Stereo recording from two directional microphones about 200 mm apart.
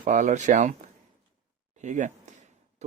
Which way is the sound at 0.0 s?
40° right (ahead or behind).